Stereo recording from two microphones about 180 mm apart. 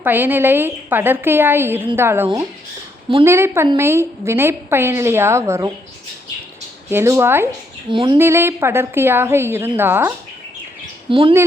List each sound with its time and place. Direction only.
0.0 s a woman's voice: 10° right (ahead or behind)
6.9 s a woman's voice: 15° right (ahead or behind)
7.9 s speech: 25° right (ahead or behind)
8.2 s a woman's voice: 15° right (ahead or behind)
11.1 s speech: 30° right (ahead or behind)